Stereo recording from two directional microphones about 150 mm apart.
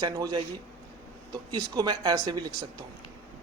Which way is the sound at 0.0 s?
25° right (ahead or behind).